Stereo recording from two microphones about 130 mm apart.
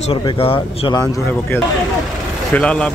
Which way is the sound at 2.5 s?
10° left (ahead or behind).